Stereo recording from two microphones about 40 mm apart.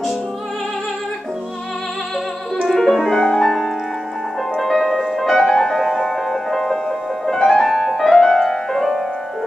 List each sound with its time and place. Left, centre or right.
2.7 s music: centre
8.7 s music: centre